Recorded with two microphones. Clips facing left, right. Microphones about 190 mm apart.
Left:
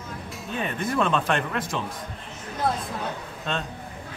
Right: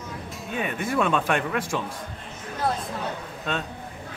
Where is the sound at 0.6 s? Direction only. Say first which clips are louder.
Even; 10° right (ahead or behind).